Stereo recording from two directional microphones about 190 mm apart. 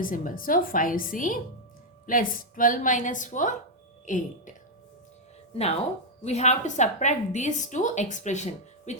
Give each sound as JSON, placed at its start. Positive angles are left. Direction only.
{"t": 0.0, "sound": "speech", "side_deg": 45}
{"t": 6.2, "sound": "a woman's voice", "side_deg": 35}